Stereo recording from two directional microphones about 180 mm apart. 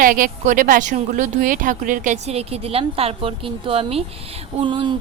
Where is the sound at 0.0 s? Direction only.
50° right (ahead or behind).